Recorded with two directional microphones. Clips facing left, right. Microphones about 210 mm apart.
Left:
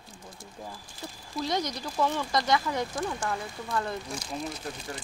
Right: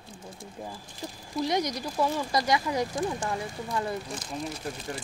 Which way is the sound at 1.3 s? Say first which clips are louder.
Right 3 dB; 15° right (ahead or behind).